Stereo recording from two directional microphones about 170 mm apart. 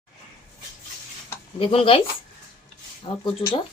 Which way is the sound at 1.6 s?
35° left (ahead or behind).